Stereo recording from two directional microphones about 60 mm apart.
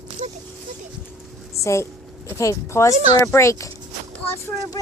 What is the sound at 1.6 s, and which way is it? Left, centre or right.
Speech, left.